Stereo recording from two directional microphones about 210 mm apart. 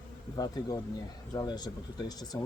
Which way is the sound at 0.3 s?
20° left (ahead or behind).